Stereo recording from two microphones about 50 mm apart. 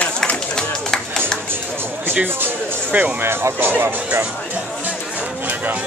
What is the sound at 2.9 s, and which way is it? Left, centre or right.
Speech, right.